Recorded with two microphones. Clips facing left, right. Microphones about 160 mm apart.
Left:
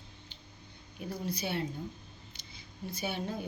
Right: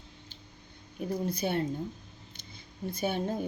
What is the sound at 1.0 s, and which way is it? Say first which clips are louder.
A woman's voice: right 5 dB; 50° right (ahead or behind).